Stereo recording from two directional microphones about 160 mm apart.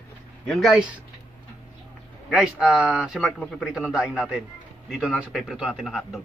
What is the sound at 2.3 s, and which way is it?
A man's voice, 5° right (ahead or behind).